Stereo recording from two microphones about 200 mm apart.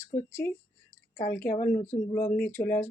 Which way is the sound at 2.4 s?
10° left (ahead or behind).